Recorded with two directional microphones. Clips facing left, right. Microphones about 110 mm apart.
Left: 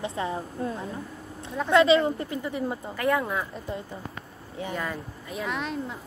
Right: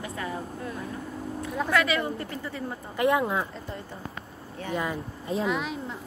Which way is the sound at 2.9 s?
20° right (ahead or behind).